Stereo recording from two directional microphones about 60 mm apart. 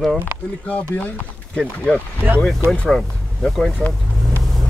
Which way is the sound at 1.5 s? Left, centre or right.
Centre.